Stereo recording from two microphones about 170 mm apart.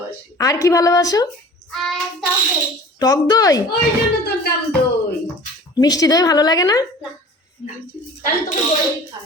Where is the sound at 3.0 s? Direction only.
20° left (ahead or behind).